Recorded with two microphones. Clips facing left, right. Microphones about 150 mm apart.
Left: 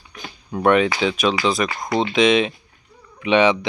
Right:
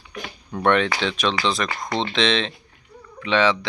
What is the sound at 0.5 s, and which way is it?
Speech, 10° left (ahead or behind).